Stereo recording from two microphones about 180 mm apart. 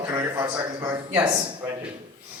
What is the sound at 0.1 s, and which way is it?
A man's voice, 20° right (ahead or behind).